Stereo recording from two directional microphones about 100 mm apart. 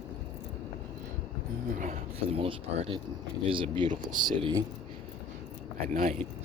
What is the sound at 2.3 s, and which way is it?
Speech, 80° right.